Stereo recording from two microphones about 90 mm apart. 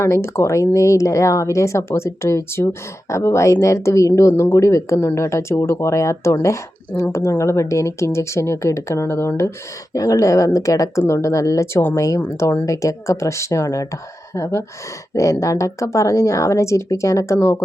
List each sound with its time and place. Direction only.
0.0 s speech: 30° left (ahead or behind)
9.9 s speech: 40° left (ahead or behind)